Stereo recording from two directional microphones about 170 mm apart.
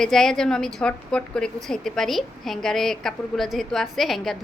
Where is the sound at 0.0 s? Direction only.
5° left (ahead or behind).